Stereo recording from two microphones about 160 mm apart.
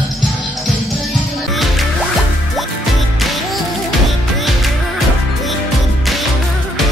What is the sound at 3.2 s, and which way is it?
Music, centre (ahead or behind).